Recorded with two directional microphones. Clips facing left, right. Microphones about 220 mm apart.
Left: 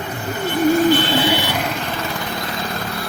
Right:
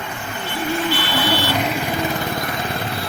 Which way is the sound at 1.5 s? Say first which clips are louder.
Right 2 dB; 5° right (ahead or behind).